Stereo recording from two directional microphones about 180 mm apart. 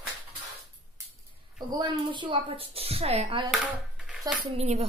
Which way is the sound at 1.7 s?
25° right (ahead or behind).